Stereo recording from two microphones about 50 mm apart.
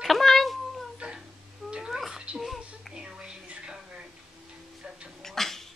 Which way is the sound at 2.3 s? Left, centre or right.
Centre.